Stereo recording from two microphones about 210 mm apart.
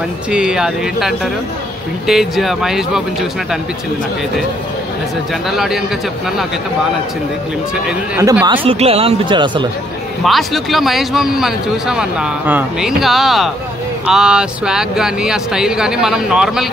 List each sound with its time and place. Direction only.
0.3 s speech: 5° right (ahead or behind)
5.5 s speech: centre (ahead or behind)
8.2 s speech: 15° right (ahead or behind)
8.6 s speech: 30° right (ahead or behind)
10.2 s speech: centre (ahead or behind)